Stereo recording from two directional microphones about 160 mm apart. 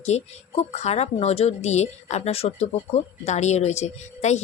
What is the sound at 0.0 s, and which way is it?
Speech, 45° left (ahead or behind).